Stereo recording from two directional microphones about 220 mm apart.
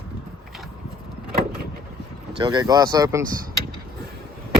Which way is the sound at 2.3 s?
20° right (ahead or behind).